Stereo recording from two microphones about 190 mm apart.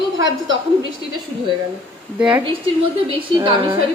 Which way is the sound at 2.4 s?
25° right (ahead or behind).